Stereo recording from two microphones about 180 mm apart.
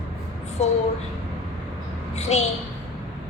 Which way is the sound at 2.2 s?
35° left (ahead or behind).